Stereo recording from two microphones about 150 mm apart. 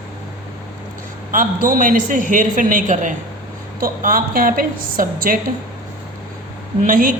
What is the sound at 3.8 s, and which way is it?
A woman's voice, 75° right (ahead or behind).